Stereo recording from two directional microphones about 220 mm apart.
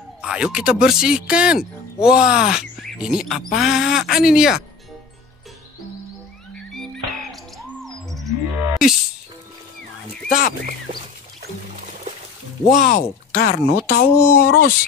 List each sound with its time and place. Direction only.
0.2 s speech: 5° right (ahead or behind)
6.7 s music: centre (ahead or behind)
12.7 s speech: 40° left (ahead or behind)